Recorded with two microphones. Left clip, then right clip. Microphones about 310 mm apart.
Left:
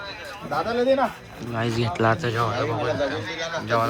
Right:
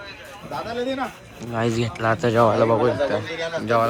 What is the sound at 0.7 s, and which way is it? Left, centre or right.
Speech, left.